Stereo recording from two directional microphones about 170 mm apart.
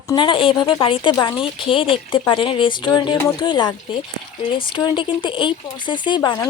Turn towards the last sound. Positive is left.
turn(degrees=25)  # may be behind; listen again after turning